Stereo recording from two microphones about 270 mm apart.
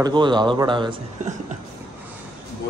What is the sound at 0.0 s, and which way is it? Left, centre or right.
A man's voice, centre.